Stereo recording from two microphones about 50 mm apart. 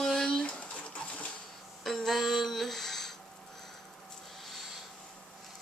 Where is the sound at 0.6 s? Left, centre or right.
Left.